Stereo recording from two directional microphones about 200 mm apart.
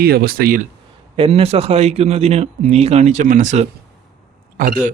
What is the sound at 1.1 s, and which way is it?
A man's voice, 30° right (ahead or behind).